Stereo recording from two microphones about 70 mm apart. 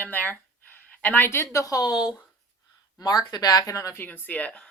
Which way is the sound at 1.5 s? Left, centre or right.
Left.